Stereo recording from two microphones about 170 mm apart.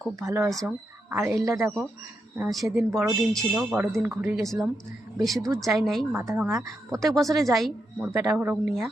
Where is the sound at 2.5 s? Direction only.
Centre (ahead or behind).